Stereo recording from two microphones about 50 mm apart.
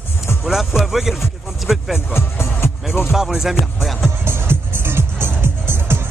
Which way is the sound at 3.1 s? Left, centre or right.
Centre.